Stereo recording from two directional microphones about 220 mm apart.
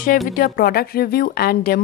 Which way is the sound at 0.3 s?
40° left (ahead or behind).